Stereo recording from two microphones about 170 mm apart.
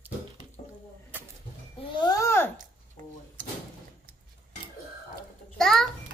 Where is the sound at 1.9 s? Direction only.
20° left (ahead or behind).